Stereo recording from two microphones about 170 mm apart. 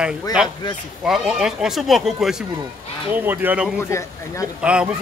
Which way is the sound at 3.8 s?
15° left (ahead or behind).